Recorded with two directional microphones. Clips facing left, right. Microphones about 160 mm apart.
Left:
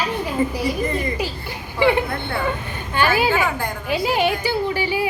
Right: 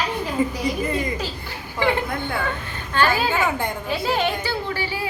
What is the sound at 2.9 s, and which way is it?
A woman's voice, 15° left (ahead or behind).